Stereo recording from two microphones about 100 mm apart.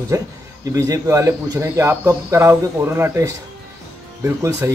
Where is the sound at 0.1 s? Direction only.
35° right (ahead or behind).